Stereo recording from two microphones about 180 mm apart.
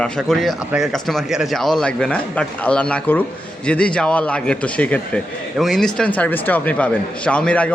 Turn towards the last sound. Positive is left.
turn(degrees=5)  # may be behind; listen again after turning